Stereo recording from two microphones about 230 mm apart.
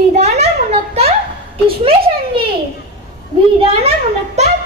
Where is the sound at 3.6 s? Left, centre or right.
Right.